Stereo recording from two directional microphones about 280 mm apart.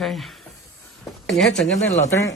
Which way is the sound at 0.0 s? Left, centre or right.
Centre.